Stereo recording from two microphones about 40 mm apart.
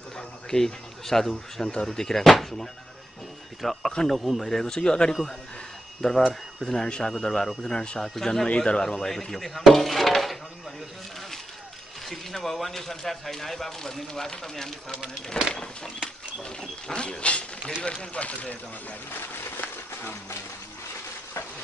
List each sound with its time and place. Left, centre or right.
0.5 s speech: centre
6.0 s speech: centre
6.7 s speech: centre
7.7 s speech: left
8.0 s speech: centre
8.5 s speech: left; by 10.4 s centre
12.1 s speech: centre
15.5 s speech: left
16.9 s speech: left
19.1 s a sound: left